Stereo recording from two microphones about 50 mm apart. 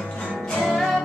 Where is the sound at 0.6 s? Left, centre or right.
Centre.